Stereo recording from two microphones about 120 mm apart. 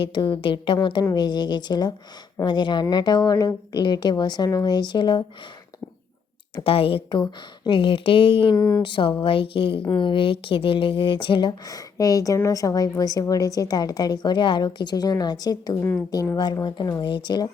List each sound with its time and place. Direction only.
0.0 s speech: 40° left (ahead or behind)
6.7 s a woman's voice: 50° left (ahead or behind)
8.5 s speech: 25° left (ahead or behind)
8.8 s a woman's voice: 45° left (ahead or behind)
15.8 s speech: 15° left (ahead or behind)
16.3 s speech: 35° left (ahead or behind)